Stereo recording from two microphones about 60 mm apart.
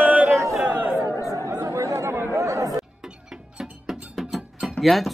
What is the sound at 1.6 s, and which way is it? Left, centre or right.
Chatter, right.